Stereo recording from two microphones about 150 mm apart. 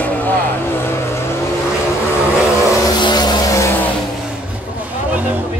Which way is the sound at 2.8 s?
30° left (ahead or behind).